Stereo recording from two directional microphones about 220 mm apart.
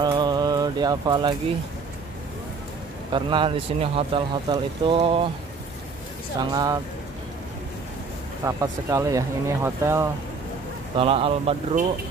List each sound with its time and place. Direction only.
0.0 s bird: 20° right (ahead or behind)
3.1 s speech: 20° right (ahead or behind)
6.5 s speech: 15° right (ahead or behind)
8.5 s speech: 15° right (ahead or behind)
11.0 s speech: 25° right (ahead or behind)